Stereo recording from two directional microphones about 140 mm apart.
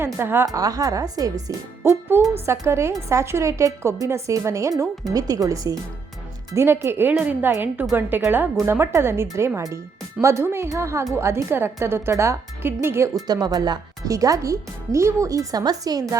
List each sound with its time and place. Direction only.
0.0 s speech: 15° right (ahead or behind)
1.8 s music: 15° right (ahead or behind)
2.3 s speech: 20° right (ahead or behind)